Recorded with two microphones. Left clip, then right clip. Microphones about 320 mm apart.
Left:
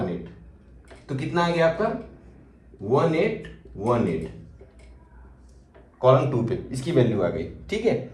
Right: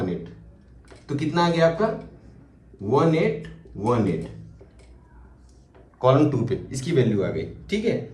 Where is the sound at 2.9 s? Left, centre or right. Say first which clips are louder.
Right 1 dB; centre.